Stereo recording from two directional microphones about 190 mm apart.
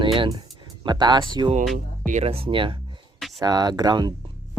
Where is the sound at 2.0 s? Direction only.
35° right (ahead or behind).